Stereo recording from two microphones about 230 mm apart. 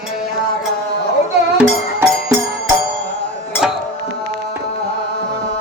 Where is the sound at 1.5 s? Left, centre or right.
Centre.